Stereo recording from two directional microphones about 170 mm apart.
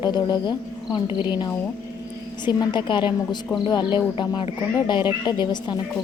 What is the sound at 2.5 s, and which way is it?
A woman's voice, 25° left (ahead or behind).